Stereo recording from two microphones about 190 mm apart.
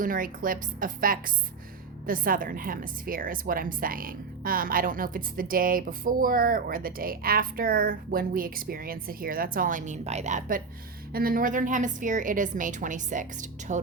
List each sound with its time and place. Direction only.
0.0 s a woman's voice: 45° right (ahead or behind)